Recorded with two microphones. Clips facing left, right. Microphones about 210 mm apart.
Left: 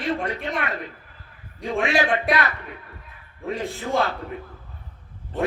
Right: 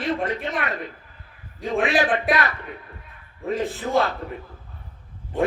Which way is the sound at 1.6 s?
Centre (ahead or behind).